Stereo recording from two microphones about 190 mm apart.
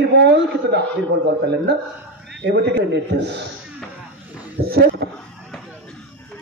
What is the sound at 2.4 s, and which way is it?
Speech, 65° right (ahead or behind).